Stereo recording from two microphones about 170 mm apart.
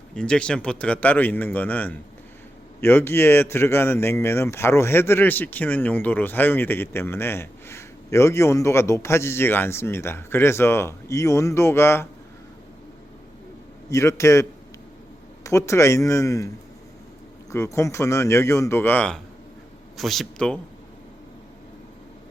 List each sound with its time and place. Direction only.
0.1 s speech: 5° left (ahead or behind)
13.9 s speech: 15° left (ahead or behind)
15.4 s speech: 15° left (ahead or behind)
17.5 s speech: 15° left (ahead or behind)